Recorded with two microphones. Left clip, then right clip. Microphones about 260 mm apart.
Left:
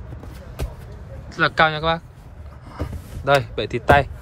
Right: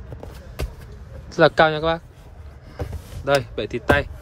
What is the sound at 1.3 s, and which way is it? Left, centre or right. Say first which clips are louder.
A man's voice: right 2 dB; centre.